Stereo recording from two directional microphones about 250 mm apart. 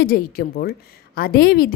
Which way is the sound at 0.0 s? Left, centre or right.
Left.